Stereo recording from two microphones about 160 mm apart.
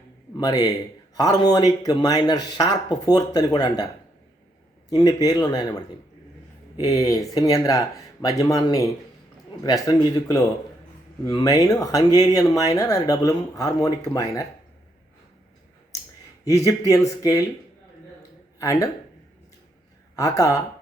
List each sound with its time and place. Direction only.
0.3 s a man's voice: 25° left (ahead or behind)
4.9 s speech: 25° left (ahead or behind)
16.4 s speech: 20° left (ahead or behind)
18.2 s a sound: 20° left (ahead or behind)
20.1 s speech: 20° left (ahead or behind)